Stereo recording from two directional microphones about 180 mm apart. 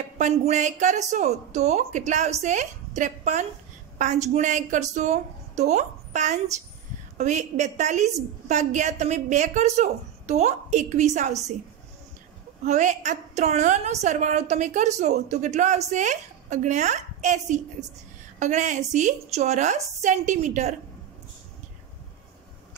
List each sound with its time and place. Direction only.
0.2 s a woman's voice: 40° right (ahead or behind)
12.6 s a woman's voice: 40° right (ahead or behind)